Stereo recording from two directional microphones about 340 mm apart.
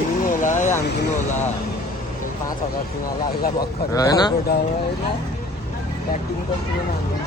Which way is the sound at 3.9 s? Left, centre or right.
Centre.